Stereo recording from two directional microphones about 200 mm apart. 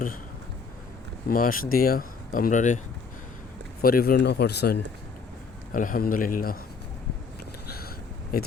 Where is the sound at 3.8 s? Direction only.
45° left (ahead or behind).